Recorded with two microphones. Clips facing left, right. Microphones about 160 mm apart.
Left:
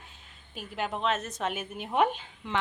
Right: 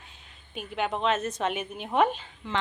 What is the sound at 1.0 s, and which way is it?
A woman's voice, centre (ahead or behind).